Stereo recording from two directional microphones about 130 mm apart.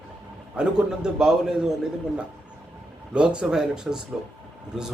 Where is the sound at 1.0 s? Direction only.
5° right (ahead or behind).